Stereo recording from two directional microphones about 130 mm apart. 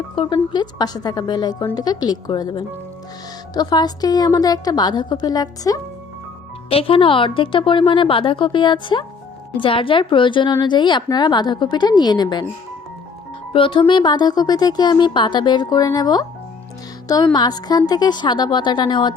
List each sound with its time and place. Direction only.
0.2 s a woman's voice: 40° left (ahead or behind)
6.7 s a woman's voice: 45° left (ahead or behind)
13.5 s a woman's voice: 40° left (ahead or behind)
17.3 s a woman's voice: 30° left (ahead or behind)